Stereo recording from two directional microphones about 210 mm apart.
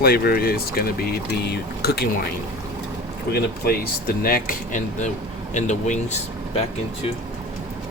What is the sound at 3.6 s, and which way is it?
Speech, 45° left (ahead or behind).